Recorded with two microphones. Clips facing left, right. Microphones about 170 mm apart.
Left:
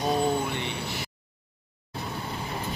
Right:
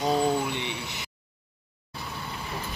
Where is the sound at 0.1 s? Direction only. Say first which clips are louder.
Right 1 dB; 20° right (ahead or behind).